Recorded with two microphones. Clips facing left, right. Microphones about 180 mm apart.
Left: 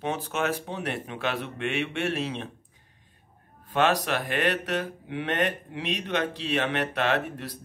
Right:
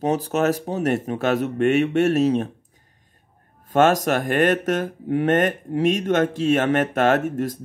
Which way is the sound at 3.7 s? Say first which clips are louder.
Right 7 dB; 45° right (ahead or behind).